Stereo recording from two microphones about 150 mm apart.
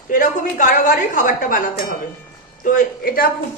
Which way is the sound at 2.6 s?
60° left (ahead or behind).